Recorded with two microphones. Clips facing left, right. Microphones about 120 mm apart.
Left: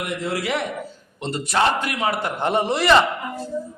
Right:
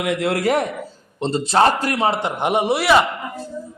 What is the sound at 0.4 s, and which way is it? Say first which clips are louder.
Speech: right 8 dB; 45° right (ahead or behind).